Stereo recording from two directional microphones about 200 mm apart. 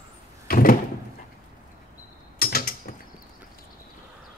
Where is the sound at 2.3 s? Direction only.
45° left (ahead or behind).